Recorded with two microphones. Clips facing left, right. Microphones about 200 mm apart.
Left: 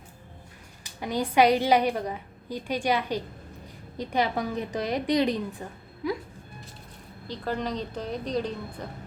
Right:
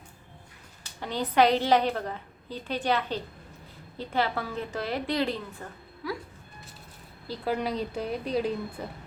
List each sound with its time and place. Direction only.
0.9 s a woman's voice: 10° left (ahead or behind)
7.3 s a woman's voice: 10° right (ahead or behind)